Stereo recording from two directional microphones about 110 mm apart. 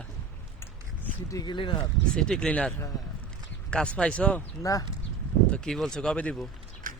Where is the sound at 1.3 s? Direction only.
35° left (ahead or behind).